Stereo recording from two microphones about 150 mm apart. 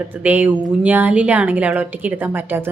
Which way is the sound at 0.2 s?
10° right (ahead or behind).